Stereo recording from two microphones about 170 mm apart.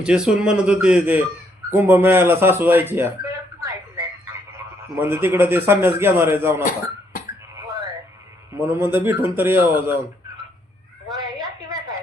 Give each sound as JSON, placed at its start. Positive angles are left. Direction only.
{"t": 0.0, "sound": "speech", "side_deg": -5}
{"t": 8.5, "sound": "speech", "side_deg": -15}
{"t": 11.3, "sound": "a sound", "side_deg": -20}